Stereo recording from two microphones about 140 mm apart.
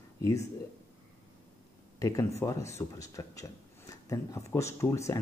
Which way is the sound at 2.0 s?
25° left (ahead or behind).